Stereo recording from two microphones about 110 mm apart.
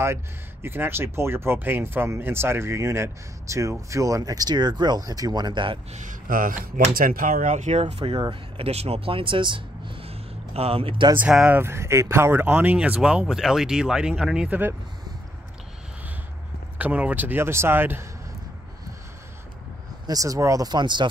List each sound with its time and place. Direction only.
0.0 s speech: 25° right (ahead or behind); by 5.8 s 45° right (ahead or behind)
7.3 s speech: 90° right
7.8 s speech: 55° right (ahead or behind)
11.1 s speech: 10° right (ahead or behind)
16.7 s speech: 15° right (ahead or behind)
20.1 s speech: 30° right (ahead or behind)